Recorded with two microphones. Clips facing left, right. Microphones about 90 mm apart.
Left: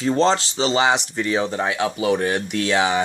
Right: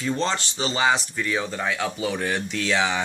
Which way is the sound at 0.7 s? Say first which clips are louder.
Left 2 dB; 20° left (ahead or behind).